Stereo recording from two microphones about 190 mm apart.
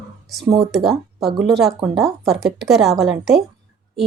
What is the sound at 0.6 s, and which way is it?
A woman's voice, centre (ahead or behind).